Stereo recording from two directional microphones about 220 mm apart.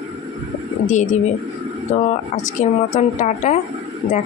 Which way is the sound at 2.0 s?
35° left (ahead or behind).